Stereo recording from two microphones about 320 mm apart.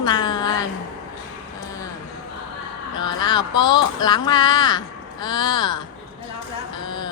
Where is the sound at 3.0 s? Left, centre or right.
Centre.